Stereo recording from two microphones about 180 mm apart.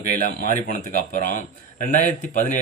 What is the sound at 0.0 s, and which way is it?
A man's voice, 45° left (ahead or behind).